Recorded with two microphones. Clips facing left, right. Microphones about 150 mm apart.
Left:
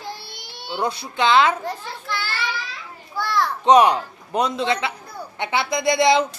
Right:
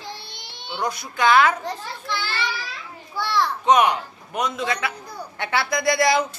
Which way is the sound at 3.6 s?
30° left (ahead or behind).